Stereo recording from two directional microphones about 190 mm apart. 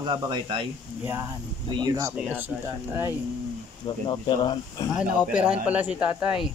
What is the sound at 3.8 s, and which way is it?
Speech, 20° left (ahead or behind).